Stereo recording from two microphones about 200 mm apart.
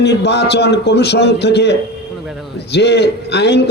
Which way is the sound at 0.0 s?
55° left (ahead or behind).